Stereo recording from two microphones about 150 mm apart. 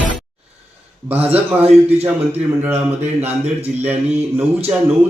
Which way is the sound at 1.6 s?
45° right (ahead or behind).